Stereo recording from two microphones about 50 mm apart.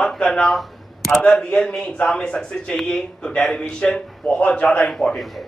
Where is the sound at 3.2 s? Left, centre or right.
Centre.